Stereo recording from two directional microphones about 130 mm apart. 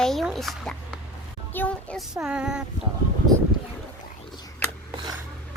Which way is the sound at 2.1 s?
5° right (ahead or behind).